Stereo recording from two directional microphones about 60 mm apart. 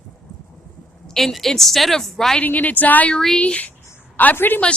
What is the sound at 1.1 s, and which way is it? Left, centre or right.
A woman's voice, centre.